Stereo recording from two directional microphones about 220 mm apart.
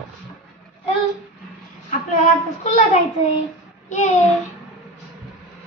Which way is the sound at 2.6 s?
30° left (ahead or behind).